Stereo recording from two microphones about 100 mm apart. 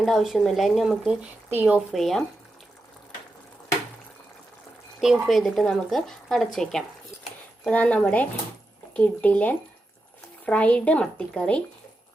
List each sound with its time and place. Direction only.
0.0 s speech: centre (ahead or behind)
1.5 s a woman's voice: 15° right (ahead or behind)
1.9 s speech: centre (ahead or behind)
4.9 s a woman's voice: centre (ahead or behind)